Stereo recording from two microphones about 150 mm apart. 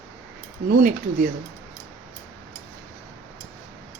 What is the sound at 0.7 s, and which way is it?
Speech, 65° right (ahead or behind).